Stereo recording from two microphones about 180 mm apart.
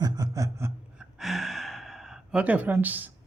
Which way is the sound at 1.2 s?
Centre (ahead or behind).